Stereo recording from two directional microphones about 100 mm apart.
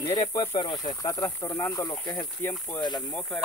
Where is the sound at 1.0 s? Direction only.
35° left (ahead or behind).